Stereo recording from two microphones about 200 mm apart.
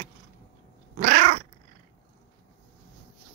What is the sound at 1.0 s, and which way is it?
Cat, 35° right (ahead or behind).